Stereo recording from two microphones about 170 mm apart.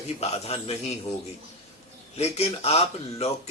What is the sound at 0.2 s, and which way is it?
Speech, 35° left (ahead or behind).